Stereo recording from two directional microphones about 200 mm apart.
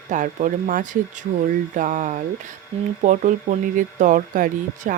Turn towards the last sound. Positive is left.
turn(degrees=-40)  # may be behind; listen again after turning